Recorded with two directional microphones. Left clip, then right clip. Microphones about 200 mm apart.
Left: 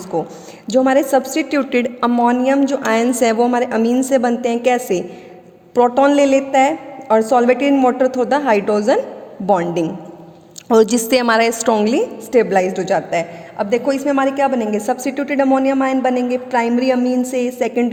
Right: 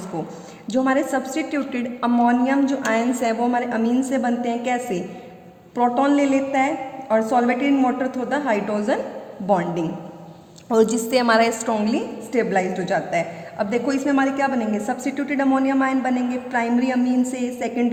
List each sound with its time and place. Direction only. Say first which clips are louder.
0.1 s a woman's voice: left 11 dB; 45° left (ahead or behind)